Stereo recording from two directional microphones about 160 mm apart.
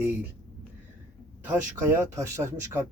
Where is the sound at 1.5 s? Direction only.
15° right (ahead or behind).